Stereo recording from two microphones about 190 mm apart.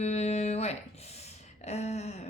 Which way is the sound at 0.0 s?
35° left (ahead or behind).